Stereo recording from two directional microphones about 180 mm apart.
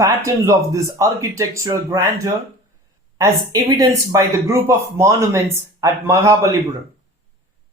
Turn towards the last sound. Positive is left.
turn(degrees=-15)  # may be behind; listen again after turning